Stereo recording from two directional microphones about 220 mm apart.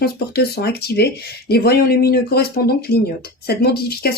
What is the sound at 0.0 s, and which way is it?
Speech, 45° left (ahead or behind).